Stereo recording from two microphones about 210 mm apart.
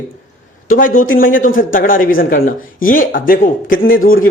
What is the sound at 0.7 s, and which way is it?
Speech, 40° left (ahead or behind).